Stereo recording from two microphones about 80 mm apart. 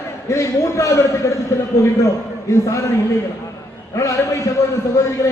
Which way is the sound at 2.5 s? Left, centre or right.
Left.